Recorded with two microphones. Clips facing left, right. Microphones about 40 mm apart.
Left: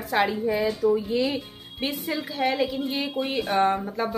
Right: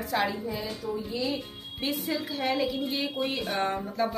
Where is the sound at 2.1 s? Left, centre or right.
Centre.